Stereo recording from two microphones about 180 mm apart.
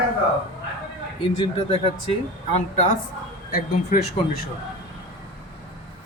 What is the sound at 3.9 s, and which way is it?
Speech, 50° left (ahead or behind).